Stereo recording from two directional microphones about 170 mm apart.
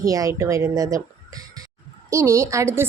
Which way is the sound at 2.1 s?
15° right (ahead or behind).